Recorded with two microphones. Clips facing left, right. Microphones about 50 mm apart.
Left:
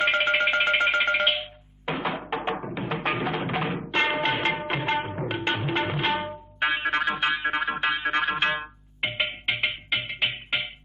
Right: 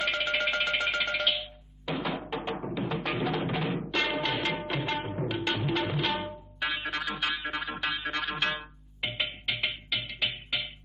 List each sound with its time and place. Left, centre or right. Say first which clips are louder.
0.0 s music: left 6 dB; left
4.7 s tabla: left 5 dB; left
7.8 s music: left 7 dB; left